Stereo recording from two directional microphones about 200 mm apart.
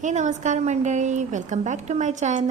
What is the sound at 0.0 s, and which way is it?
A woman's voice, 35° right (ahead or behind).